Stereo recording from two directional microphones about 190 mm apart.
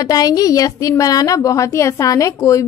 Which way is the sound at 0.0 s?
20° left (ahead or behind).